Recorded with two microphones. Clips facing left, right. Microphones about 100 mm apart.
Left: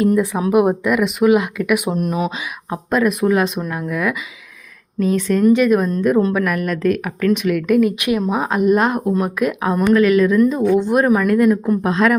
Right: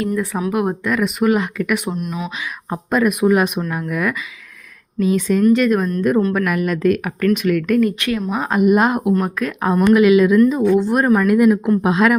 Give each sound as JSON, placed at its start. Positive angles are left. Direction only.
{"t": 0.5, "sound": "speech", "side_deg": 15}
{"t": 0.9, "sound": "speech", "side_deg": 5}
{"t": 2.0, "sound": "speech", "side_deg": 45}
{"t": 2.6, "sound": "speech", "side_deg": 0}
{"t": 9.1, "sound": "speech", "side_deg": 10}
{"t": 9.9, "sound": "speech", "side_deg": -10}